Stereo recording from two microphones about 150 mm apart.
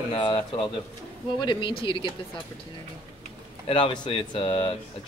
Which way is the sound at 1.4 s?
35° left (ahead or behind).